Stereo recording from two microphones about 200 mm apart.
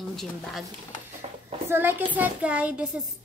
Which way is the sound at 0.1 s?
Centre (ahead or behind).